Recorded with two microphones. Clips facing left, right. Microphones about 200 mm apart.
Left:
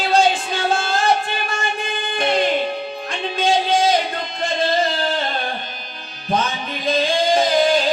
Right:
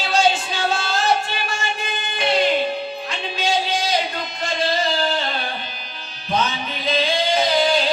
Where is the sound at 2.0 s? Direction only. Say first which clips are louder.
Left 1 dB; 50° left (ahead or behind).